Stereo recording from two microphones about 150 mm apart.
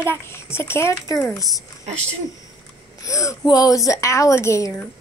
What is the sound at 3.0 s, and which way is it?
A woman's voice, 20° left (ahead or behind).